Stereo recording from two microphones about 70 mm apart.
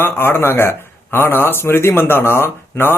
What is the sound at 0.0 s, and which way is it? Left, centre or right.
Speech, left.